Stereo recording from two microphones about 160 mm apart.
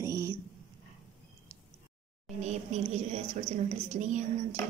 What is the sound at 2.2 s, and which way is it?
A woman's voice, 45° right (ahead or behind).